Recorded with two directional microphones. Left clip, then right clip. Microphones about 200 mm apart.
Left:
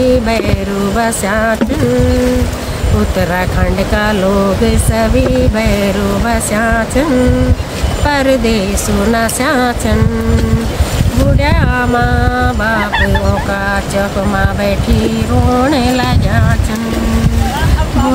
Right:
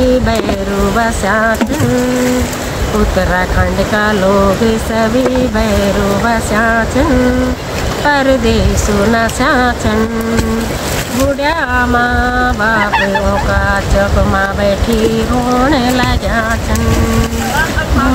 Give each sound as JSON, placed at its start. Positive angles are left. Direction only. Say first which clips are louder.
{"t": 0.9, "sound": "speech", "louder": "even", "side_deg": 25}
{"t": 6.2, "sound": "speech", "louder": "right 1 dB", "side_deg": 25}
{"t": 8.1, "sound": "speech", "louder": "right 1 dB", "side_deg": 20}
{"t": 11.4, "sound": "speech", "louder": "right 2 dB", "side_deg": 20}
{"t": 15.6, "sound": "speech", "louder": "right 1 dB", "side_deg": 25}